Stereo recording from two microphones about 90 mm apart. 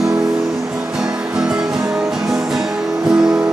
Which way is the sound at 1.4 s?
10° right (ahead or behind).